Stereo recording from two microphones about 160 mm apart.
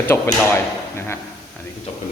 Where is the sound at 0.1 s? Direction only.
15° left (ahead or behind).